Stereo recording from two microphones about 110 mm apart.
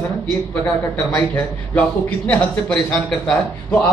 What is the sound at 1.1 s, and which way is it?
A man's voice, 15° left (ahead or behind).